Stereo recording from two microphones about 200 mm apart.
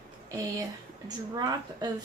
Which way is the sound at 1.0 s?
20° right (ahead or behind).